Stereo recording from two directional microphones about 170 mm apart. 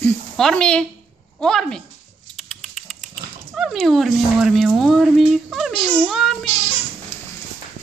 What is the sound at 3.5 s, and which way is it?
Speech, centre (ahead or behind).